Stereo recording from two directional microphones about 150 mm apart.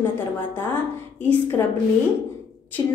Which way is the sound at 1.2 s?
15° left (ahead or behind).